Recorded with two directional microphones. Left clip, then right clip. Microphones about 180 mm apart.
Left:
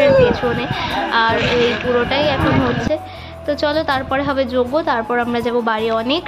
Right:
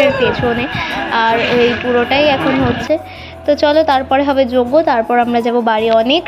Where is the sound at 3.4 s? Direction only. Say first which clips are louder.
Right 7 dB; 15° right (ahead or behind).